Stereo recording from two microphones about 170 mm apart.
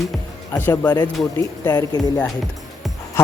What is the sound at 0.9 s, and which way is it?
Speech, 25° left (ahead or behind).